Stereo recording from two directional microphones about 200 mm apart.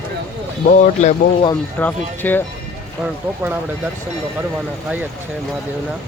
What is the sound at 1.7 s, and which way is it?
Speech, 10° left (ahead or behind).